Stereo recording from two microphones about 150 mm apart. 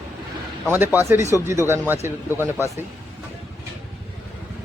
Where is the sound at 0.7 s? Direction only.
15° right (ahead or behind).